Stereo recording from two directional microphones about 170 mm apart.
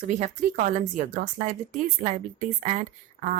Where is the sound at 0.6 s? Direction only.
45° right (ahead or behind).